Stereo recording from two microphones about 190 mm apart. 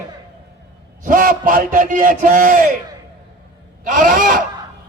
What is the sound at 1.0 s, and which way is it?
A man's voice, 45° right (ahead or behind).